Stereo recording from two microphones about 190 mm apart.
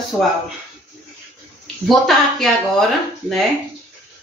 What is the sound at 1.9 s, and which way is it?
Speech, centre (ahead or behind).